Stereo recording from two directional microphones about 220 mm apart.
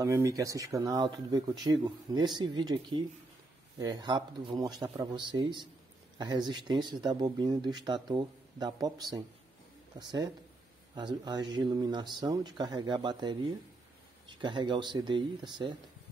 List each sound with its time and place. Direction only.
0.0 s speech: 15° right (ahead or behind)
14.4 s speech: 20° right (ahead or behind)